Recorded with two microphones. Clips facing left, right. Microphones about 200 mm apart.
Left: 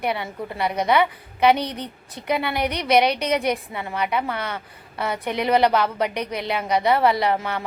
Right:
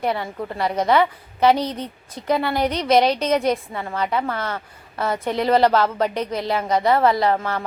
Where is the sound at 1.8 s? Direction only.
20° left (ahead or behind).